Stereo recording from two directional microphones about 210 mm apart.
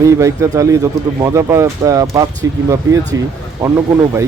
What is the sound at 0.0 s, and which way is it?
Speech, 15° right (ahead or behind).